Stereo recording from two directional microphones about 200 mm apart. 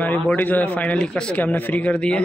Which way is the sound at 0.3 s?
10° left (ahead or behind).